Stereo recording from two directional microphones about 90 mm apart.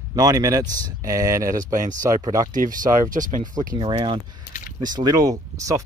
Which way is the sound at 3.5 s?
55° right (ahead or behind).